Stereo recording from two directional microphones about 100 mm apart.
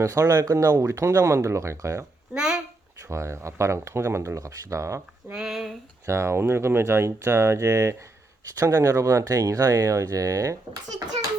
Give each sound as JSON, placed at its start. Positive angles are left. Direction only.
{"t": 0.0, "sound": "speech", "side_deg": -35}
{"t": 2.3, "sound": "a sound", "side_deg": -5}
{"t": 3.1, "sound": "speech", "side_deg": -30}
{"t": 5.3, "sound": "speech", "side_deg": -5}
{"t": 6.1, "sound": "speech", "side_deg": -30}